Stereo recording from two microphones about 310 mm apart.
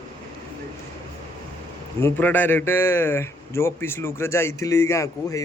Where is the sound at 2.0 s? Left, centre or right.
Centre.